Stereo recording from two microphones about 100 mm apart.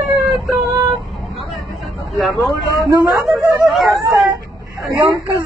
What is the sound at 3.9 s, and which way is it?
Dog, 35° right (ahead or behind).